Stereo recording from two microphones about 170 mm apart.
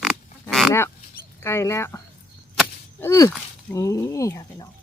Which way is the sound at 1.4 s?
15° left (ahead or behind).